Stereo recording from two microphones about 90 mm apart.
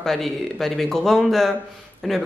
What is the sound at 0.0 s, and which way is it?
Speech, 5° left (ahead or behind).